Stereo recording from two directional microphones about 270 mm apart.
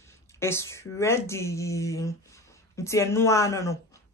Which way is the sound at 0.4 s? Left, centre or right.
Centre.